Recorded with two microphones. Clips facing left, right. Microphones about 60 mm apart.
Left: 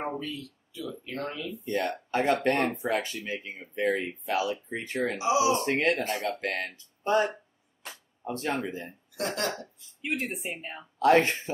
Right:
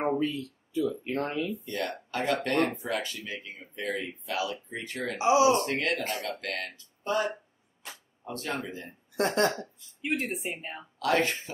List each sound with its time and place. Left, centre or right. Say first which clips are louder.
0.2 s speech: right 7 dB; right
1.6 s speech: left 4 dB; left
5.2 s speech: right 4 dB; right
5.6 s speech: left 3 dB; left
9.1 s speech: right 6 dB; right
10.0 s speech: right 1 dB; centre
11.0 s speech: left 5 dB; left